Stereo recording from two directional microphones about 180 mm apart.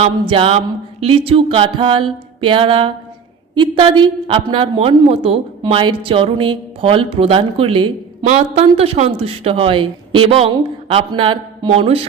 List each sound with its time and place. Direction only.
0.0 s a man's voice: 30° right (ahead or behind)